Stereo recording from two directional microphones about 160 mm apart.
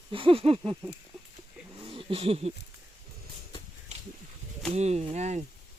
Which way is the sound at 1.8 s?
35° right (ahead or behind).